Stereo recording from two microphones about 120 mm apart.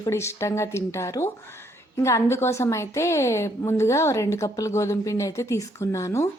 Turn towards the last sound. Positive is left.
turn(degrees=25)  # may be behind; listen again after turning